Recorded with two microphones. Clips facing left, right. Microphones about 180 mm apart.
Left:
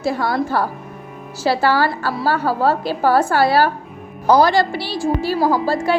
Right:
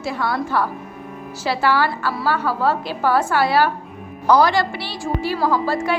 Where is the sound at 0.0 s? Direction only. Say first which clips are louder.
Left 4 dB; 40° left (ahead or behind).